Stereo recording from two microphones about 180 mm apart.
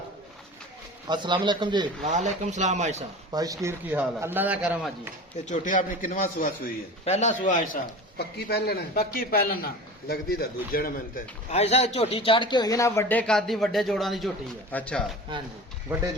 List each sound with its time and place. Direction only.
1.0 s a man's voice: 25° right (ahead or behind)
2.0 s speech: 40° right (ahead or behind)
3.3 s a man's voice: 20° right (ahead or behind)
5.5 s a man's voice: 45° left (ahead or behind)
8.4 s a man's voice: 65° left (ahead or behind)
11.5 s a man's voice: 35° left (ahead or behind); by 15.0 s 5° left (ahead or behind)